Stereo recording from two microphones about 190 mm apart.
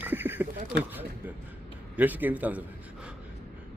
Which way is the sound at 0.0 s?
10° right (ahead or behind).